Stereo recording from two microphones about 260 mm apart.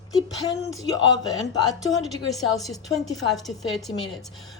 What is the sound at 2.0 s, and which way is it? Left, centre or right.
A woman's voice, centre.